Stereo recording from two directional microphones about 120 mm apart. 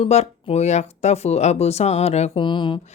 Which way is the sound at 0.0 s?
65° left (ahead or behind).